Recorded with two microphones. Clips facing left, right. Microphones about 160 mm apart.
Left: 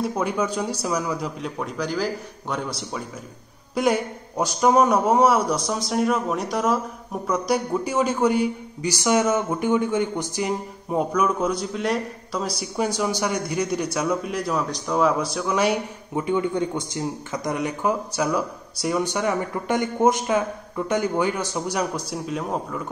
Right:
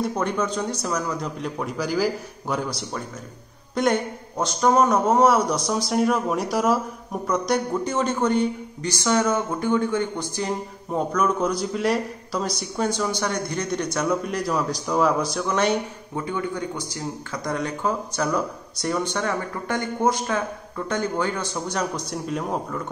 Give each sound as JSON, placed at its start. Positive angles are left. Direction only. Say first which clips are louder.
{"t": 0.0, "sound": "a man's voice", "louder": "even", "side_deg": 5}
{"t": 16.2, "sound": "a man's voice", "louder": "left 5 dB", "side_deg": 20}